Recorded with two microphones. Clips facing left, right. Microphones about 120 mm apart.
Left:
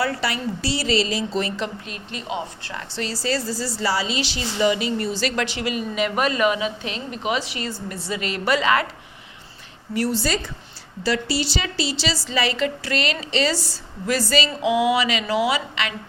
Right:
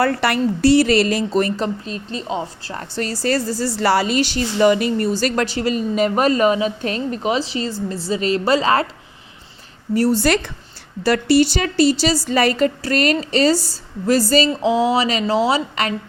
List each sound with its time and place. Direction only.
0.0 s speech: 55° right (ahead or behind); by 2.8 s 35° right (ahead or behind)
2.9 s a woman's voice: 50° right (ahead or behind); by 8.9 s 35° right (ahead or behind)
9.9 s a woman's voice: 40° right (ahead or behind)
10.2 s speech: 65° right (ahead or behind)
11.0 s a woman's voice: 55° right (ahead or behind); by 16.0 s 40° right (ahead or behind)